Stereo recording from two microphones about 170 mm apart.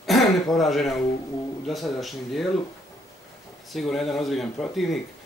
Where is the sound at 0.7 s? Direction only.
Centre (ahead or behind).